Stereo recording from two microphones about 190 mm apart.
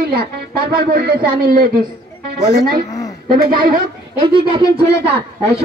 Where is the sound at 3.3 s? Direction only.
50° right (ahead or behind).